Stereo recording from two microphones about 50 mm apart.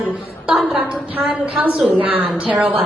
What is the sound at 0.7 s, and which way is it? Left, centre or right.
A woman's voice, right.